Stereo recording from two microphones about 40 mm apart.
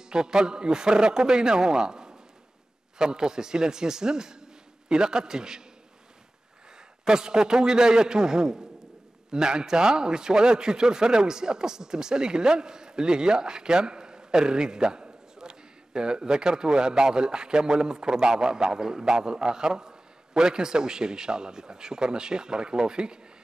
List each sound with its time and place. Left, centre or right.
0.1 s a man's voice: centre
7.1 s a man's voice: centre